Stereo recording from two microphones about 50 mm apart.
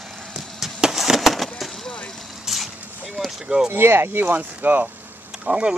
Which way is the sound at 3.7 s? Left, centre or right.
Right.